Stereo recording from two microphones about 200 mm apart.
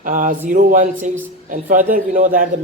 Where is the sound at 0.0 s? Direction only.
40° right (ahead or behind).